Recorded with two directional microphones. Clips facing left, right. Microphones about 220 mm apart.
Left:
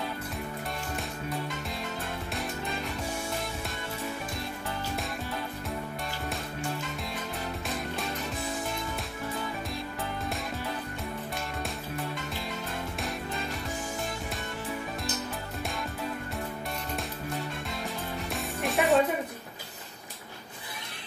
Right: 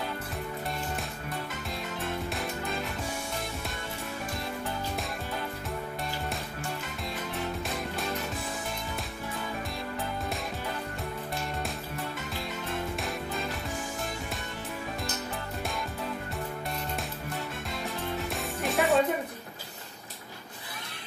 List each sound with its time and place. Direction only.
18.3 s music: centre (ahead or behind)